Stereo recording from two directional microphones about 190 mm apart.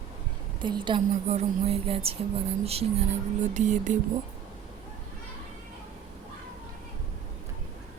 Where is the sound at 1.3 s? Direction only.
35° right (ahead or behind).